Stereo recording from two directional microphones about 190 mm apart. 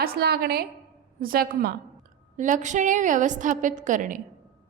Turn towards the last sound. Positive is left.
turn(degrees=-40)  # may be behind; listen again after turning